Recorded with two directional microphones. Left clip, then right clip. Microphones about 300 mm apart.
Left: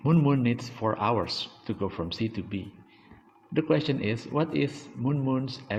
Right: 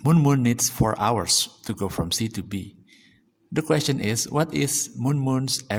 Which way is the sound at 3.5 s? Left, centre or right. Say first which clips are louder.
Right 3 dB; right.